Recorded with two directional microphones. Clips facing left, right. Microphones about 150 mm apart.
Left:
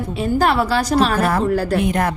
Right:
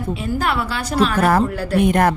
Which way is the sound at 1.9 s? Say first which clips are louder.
Right 3 dB; 60° right (ahead or behind).